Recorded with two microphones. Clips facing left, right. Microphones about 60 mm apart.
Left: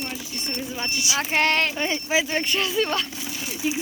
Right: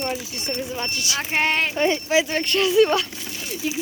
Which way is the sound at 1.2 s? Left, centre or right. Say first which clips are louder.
Even; centre.